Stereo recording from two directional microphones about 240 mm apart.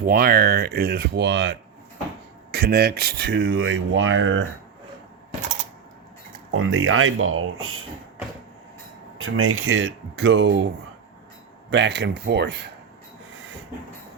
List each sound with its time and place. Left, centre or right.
0.0 s speech: right
6.5 s speech: right
9.1 s speech: right
11.7 s speech: right